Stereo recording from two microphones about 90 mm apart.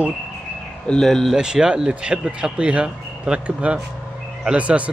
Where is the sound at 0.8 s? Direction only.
10° left (ahead or behind).